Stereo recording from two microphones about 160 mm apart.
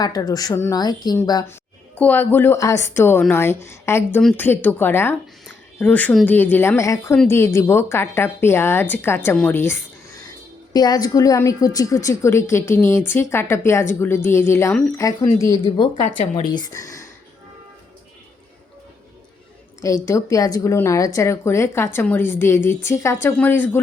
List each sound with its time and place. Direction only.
0.0 s a woman's voice: 25° left (ahead or behind)
16.0 s speech: 50° left (ahead or behind)
16.6 s speech: 20° left (ahead or behind)
19.8 s a woman's voice: 20° left (ahead or behind)